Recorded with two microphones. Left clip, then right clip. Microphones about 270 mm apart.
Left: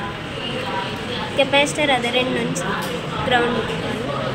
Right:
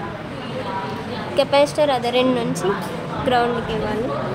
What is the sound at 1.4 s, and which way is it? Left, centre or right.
Speech, right.